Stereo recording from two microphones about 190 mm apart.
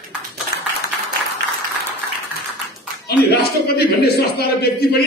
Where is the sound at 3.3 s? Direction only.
55° left (ahead or behind).